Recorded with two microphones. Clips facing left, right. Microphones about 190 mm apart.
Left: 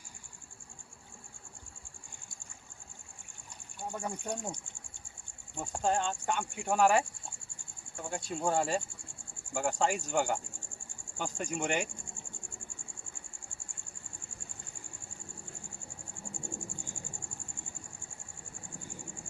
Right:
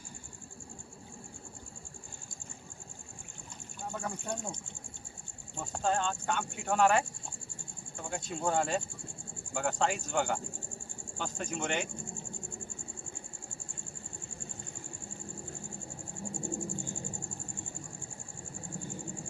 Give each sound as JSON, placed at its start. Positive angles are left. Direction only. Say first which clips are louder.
{"t": 3.9, "sound": "speech", "louder": "even", "side_deg": 15}
{"t": 5.7, "sound": "speech", "louder": "even", "side_deg": 10}
{"t": 8.0, "sound": "speech", "louder": "left 1 dB", "side_deg": 10}
{"t": 16.3, "sound": "cricket", "louder": "right 7 dB", "side_deg": -20}